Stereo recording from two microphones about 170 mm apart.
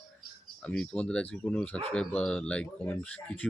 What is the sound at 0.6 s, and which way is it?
Speech, 5° left (ahead or behind).